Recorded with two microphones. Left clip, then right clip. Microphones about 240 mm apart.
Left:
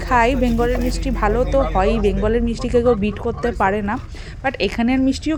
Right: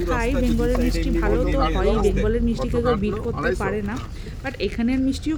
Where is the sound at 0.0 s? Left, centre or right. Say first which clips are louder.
Left 7 dB; centre.